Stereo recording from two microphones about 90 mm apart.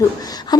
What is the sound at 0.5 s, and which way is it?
Wail, 50° left (ahead or behind).